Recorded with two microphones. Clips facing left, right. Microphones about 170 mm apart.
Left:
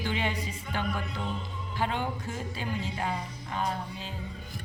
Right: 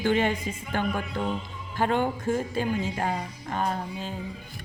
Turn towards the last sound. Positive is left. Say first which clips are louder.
# right 4 dB
turn(degrees=-50)  # may be behind; listen again after turning